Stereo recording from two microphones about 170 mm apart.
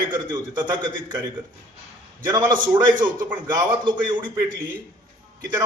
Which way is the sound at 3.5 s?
25° right (ahead or behind).